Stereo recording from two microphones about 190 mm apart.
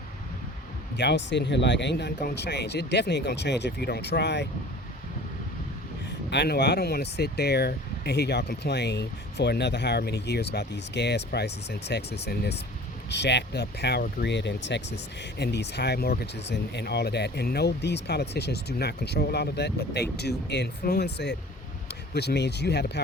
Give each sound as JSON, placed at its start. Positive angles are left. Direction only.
{"t": 0.9, "sound": "speech", "side_deg": 65}
{"t": 6.3, "sound": "speech", "side_deg": 65}